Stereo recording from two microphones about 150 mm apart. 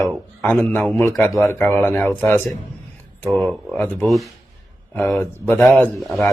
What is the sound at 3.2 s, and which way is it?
Speech, centre (ahead or behind).